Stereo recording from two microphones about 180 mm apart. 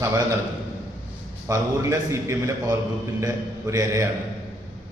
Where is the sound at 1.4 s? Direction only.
15° right (ahead or behind).